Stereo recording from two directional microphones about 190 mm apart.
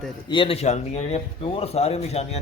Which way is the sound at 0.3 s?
30° left (ahead or behind).